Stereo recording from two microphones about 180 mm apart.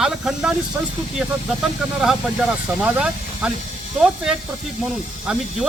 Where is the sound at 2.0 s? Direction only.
5° right (ahead or behind).